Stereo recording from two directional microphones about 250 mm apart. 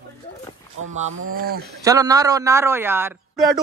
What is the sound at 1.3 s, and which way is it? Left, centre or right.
Speech, right.